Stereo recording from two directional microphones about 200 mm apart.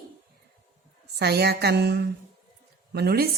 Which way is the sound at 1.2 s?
55° right (ahead or behind).